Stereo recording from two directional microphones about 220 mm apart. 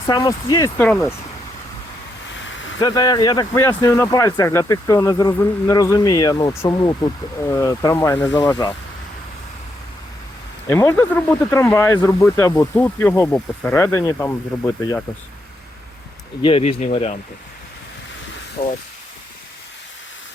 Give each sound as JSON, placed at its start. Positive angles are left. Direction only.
{"t": 0.0, "sound": "speech", "side_deg": 15}
{"t": 2.3, "sound": "a sound", "side_deg": 60}
{"t": 2.8, "sound": "speech", "side_deg": 20}
{"t": 10.7, "sound": "speech", "side_deg": 10}
{"t": 16.4, "sound": "speech", "side_deg": 25}
{"t": 18.6, "sound": "speech", "side_deg": 45}